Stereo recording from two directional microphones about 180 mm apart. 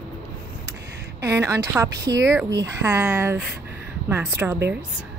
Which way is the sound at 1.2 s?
15° right (ahead or behind).